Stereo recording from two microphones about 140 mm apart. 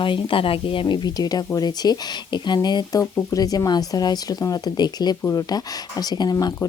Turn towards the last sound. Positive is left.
turn(degrees=25)  # may be behind; listen again after turning